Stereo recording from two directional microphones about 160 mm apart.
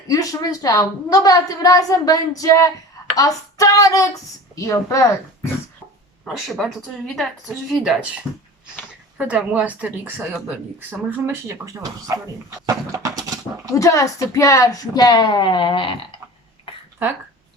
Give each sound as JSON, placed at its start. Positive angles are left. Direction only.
{"t": 0.1, "sound": "a woman's voice", "side_deg": 20}
{"t": 6.2, "sound": "a woman's voice", "side_deg": 0}
{"t": 9.1, "sound": "speech", "side_deg": -10}
{"t": 13.7, "sound": "a woman's voice", "side_deg": 20}